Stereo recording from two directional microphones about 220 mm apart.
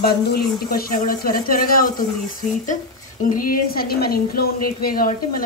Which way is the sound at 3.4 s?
40° left (ahead or behind).